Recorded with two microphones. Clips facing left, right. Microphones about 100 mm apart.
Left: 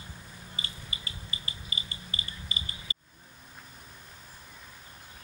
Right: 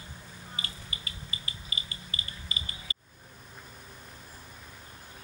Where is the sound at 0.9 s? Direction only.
30° left (ahead or behind).